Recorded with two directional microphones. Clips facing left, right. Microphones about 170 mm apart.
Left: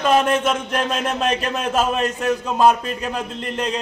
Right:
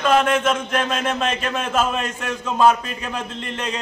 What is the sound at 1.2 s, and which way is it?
Speech, 35° left (ahead or behind).